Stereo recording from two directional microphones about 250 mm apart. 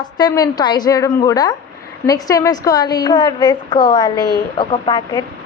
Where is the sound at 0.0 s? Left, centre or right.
Centre.